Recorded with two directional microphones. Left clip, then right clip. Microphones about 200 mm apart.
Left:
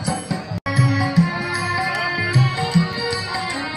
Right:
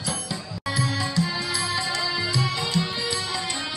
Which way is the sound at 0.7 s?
5° left (ahead or behind).